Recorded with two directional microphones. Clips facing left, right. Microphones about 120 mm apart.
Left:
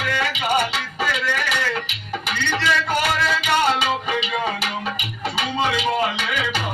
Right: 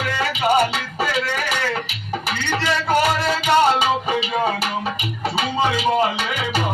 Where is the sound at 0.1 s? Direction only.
35° right (ahead or behind).